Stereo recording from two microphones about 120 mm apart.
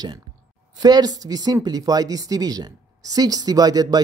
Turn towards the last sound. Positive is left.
turn(degrees=-35)  # may be behind; listen again after turning